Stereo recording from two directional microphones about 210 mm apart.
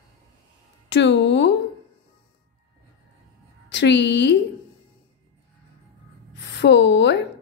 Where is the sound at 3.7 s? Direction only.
55° left (ahead or behind).